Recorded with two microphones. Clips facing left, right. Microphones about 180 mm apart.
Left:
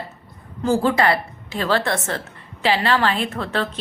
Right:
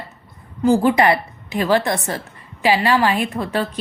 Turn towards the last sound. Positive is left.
turn(degrees=-15)  # may be behind; listen again after turning